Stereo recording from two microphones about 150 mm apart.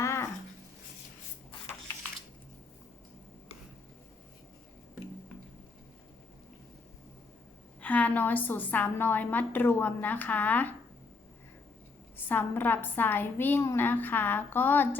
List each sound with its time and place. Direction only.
0.0 s a sound: 20° left (ahead or behind)
7.8 s a woman's voice: 10° left (ahead or behind)
12.3 s a woman's voice: 15° left (ahead or behind)